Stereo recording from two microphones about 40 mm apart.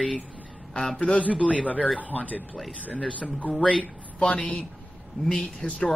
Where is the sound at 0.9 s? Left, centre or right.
Left.